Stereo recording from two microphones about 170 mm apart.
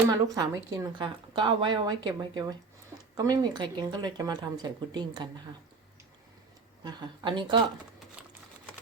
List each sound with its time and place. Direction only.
0.1 s a woman's voice: 20° right (ahead or behind)
6.8 s a woman's voice: 25° right (ahead or behind)